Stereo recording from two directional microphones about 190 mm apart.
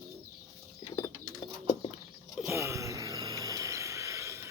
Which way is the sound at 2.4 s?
15° right (ahead or behind).